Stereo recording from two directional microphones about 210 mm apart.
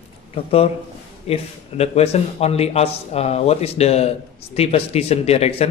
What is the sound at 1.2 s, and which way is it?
A man's voice, 30° left (ahead or behind).